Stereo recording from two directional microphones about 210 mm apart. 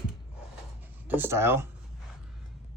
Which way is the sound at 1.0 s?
10° right (ahead or behind).